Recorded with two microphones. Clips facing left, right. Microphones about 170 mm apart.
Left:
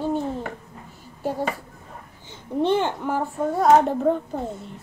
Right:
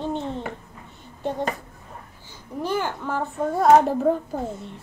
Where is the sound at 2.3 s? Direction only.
25° left (ahead or behind).